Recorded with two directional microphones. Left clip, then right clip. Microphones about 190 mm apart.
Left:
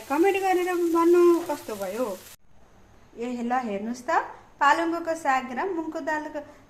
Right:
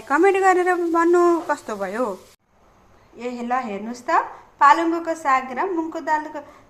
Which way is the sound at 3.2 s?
10° right (ahead or behind).